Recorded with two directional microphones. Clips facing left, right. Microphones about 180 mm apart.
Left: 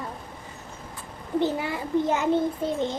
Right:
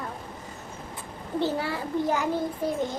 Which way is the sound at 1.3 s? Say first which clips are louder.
Left 2 dB; 15° left (ahead or behind).